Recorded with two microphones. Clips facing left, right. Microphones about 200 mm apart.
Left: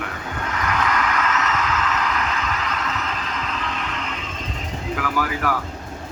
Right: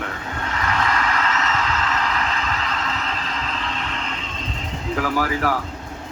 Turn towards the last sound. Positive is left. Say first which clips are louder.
# right 2 dB
turn(degrees=-35)  # may be behind; listen again after turning